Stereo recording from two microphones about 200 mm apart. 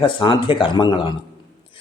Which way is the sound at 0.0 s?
25° left (ahead or behind).